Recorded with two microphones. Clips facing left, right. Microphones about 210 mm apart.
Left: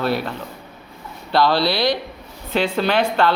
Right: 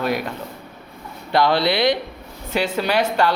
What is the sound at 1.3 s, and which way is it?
Speech, 20° right (ahead or behind).